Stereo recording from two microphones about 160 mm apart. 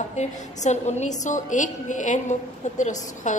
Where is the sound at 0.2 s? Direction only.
45° left (ahead or behind).